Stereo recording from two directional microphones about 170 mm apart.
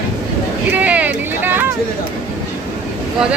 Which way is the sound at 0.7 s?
10° right (ahead or behind).